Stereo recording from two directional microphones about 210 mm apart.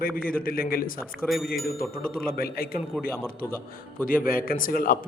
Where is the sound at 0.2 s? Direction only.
45° left (ahead or behind).